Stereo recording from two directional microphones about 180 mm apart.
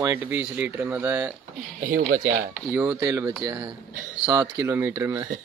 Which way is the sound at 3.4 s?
20° right (ahead or behind).